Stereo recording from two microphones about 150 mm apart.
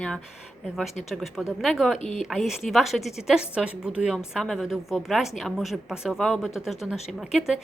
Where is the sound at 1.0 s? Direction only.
Centre (ahead or behind).